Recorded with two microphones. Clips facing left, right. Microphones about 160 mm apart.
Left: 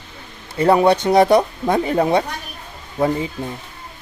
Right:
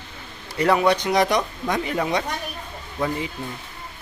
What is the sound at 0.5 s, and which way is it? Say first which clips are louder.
Speech: left 5 dB; 30° left (ahead or behind).